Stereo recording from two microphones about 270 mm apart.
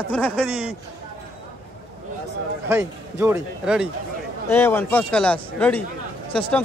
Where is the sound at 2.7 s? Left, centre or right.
Centre.